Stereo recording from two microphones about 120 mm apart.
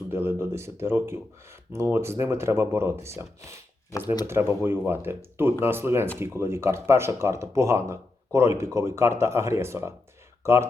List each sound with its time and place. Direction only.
0.1 s speech: 20° right (ahead or behind)
3.9 s speech: 35° left (ahead or behind)
4.3 s speech: 20° right (ahead or behind)